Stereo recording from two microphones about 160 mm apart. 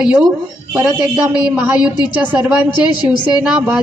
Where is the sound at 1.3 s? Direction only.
10° right (ahead or behind).